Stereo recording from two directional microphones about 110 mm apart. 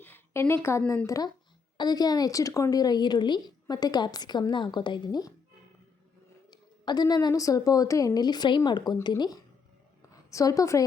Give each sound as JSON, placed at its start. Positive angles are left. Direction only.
{"t": 0.0, "sound": "a woman's voice", "side_deg": 20}
{"t": 6.5, "sound": "a woman's voice", "side_deg": 40}